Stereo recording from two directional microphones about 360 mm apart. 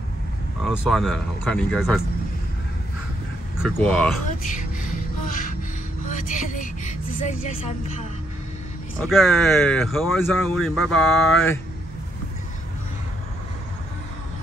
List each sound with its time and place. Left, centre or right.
0.7 s speech: centre
3.6 s speech: centre
5.3 s music: left
6.0 s vehicle: left
9.0 s speech: centre